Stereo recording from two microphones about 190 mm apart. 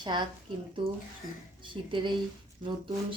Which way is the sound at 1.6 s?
25° right (ahead or behind).